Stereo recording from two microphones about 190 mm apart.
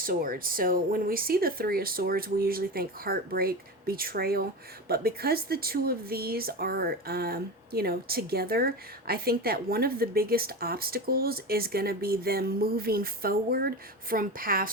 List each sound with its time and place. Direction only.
0.0 s speech: 50° right (ahead or behind)